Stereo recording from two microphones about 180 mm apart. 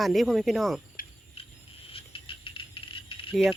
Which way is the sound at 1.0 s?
50° left (ahead or behind).